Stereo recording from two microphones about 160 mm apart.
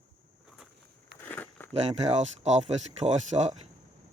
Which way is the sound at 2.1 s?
45° right (ahead or behind).